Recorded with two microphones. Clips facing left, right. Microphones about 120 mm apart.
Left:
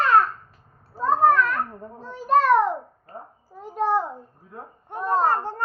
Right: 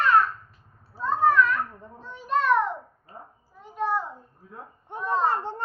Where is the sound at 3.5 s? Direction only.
35° left (ahead or behind).